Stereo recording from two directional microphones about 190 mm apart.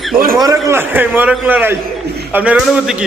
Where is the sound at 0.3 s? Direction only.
15° right (ahead or behind).